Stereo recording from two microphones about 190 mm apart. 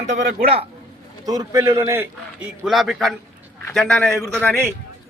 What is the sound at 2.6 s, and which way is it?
A man's voice, centre (ahead or behind).